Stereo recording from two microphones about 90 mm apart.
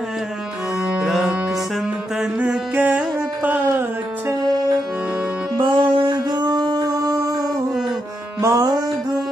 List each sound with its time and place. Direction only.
0.9 s music: 5° right (ahead or behind)
2.4 s music: 15° right (ahead or behind)
5.6 s music: 70° right (ahead or behind)
6.3 s a sound: 50° right (ahead or behind)
8.4 s music: 35° right (ahead or behind)